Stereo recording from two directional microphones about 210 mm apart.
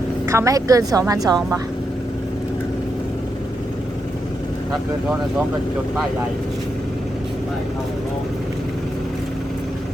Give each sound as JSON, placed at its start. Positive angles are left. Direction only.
{"t": 0.3, "sound": "a woman's voice", "side_deg": -15}